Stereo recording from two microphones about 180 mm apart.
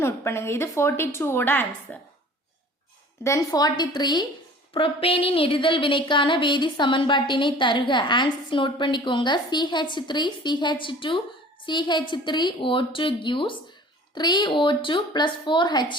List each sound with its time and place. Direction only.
0.0 s a woman's voice: 15° left (ahead or behind)
3.2 s a woman's voice: 20° left (ahead or behind)